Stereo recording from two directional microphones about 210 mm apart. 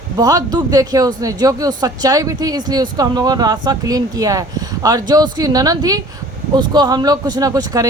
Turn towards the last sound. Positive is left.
turn(degrees=-15)  # may be behind; listen again after turning